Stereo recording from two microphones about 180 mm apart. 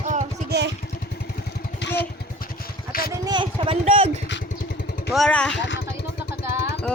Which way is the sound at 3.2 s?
25° right (ahead or behind).